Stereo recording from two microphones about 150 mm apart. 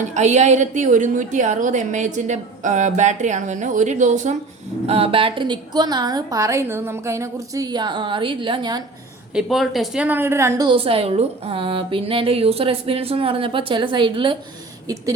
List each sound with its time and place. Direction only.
0.0 s a woman's voice: 50° right (ahead or behind)
4.9 s a woman's voice: 40° right (ahead or behind)
9.3 s a woman's voice: centre (ahead or behind); by 10.7 s 20° right (ahead or behind)
10.7 s a woman's voice: 40° right (ahead or behind)